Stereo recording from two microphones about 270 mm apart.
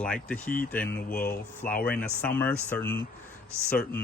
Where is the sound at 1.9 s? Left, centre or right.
Centre.